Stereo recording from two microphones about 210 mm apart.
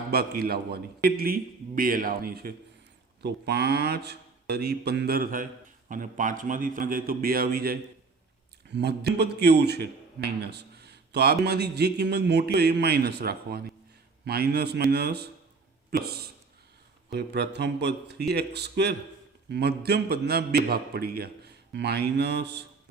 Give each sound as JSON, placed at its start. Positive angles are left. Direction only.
{"t": 0.1, "sound": "a man's voice", "side_deg": -50}